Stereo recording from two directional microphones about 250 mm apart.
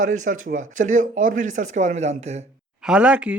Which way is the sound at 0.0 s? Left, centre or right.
Right.